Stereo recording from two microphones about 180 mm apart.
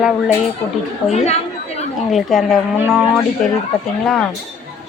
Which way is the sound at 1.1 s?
40° left (ahead or behind).